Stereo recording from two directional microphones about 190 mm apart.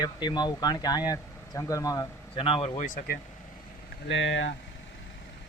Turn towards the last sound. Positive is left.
turn(degrees=80)